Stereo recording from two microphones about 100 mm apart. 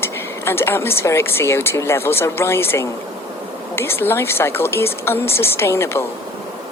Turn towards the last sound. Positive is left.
turn(degrees=25)  # may be behind; listen again after turning